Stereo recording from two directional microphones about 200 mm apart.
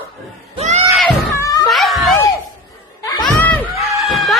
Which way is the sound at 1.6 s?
Centre (ahead or behind).